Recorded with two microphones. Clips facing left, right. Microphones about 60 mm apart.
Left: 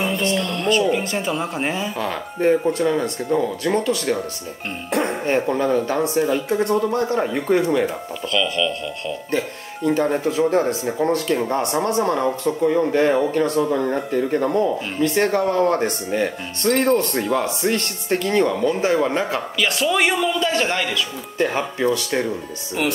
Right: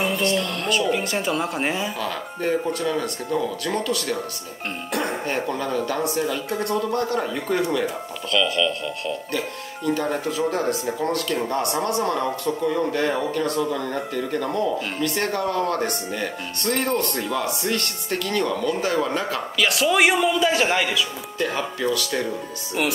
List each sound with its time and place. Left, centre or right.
0.4 s speech: centre
2.0 s speech: left
8.3 s speech: centre
9.8 s speech: left
19.6 s a man's voice: centre
21.4 s speech: left